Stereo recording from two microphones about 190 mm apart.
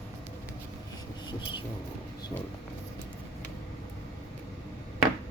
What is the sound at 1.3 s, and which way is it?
Vehicle, 25° left (ahead or behind).